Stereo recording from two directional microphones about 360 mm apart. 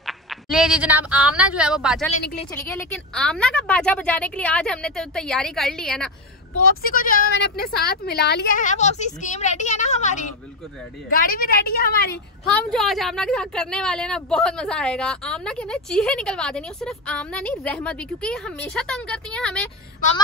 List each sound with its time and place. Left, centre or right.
0.0 s a woman's voice: centre
6.6 s speech: left
12.5 s a woman's voice: centre